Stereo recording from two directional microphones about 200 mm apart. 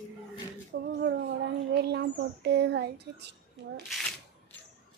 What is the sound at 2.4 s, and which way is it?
Child singing, 55° right (ahead or behind).